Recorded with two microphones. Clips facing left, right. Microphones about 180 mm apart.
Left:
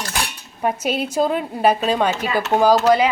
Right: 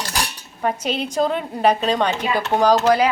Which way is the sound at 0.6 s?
10° left (ahead or behind).